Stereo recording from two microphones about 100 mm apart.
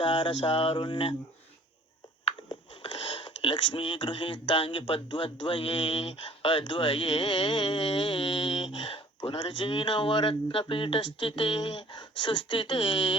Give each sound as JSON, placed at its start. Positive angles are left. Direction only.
{"t": 0.0, "sound": "speech", "side_deg": 55}
{"t": 2.2, "sound": "speech", "side_deg": 55}